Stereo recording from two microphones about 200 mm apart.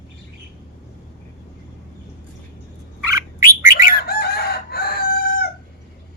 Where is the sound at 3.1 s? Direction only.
15° right (ahead or behind).